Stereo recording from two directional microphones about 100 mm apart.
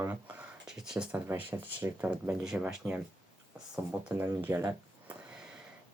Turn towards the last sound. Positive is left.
turn(degrees=-25)  # may be behind; listen again after turning